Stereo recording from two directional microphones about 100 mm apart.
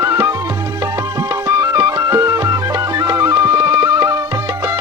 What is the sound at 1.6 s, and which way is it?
Music, 35° right (ahead or behind).